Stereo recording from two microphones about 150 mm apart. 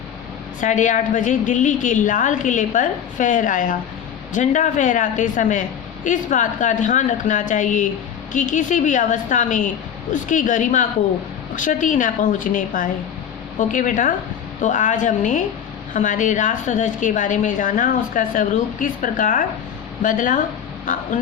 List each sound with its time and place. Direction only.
0.6 s a woman's voice: 55° left (ahead or behind)